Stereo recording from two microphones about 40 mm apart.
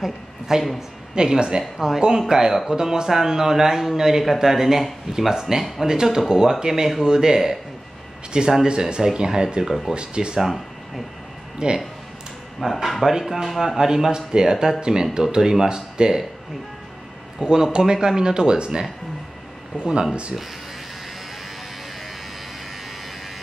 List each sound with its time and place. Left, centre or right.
0.0 s a woman's voice: centre
1.1 s speech: centre
5.9 s speech: centre
10.3 s speech: centre
11.6 s speech: right
12.5 s speech: centre
17.4 s a man's voice: centre